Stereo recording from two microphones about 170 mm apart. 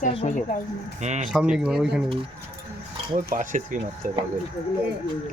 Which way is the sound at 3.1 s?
50° right (ahead or behind).